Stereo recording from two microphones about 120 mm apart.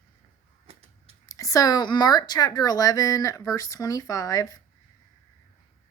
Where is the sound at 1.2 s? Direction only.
30° left (ahead or behind).